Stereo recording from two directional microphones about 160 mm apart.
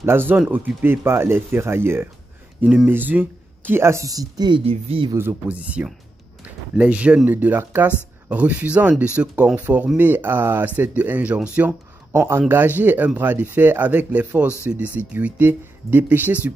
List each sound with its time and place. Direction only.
0.0 s speech: 15° right (ahead or behind); by 5.1 s 35° right (ahead or behind)
5.1 s speech: 10° right (ahead or behind)